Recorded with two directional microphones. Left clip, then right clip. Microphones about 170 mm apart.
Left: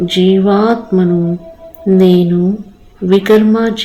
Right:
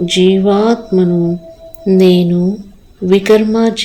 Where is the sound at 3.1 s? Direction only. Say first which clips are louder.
Even; 45° right (ahead or behind).